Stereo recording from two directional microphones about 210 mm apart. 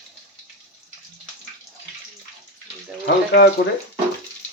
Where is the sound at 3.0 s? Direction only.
50° left (ahead or behind).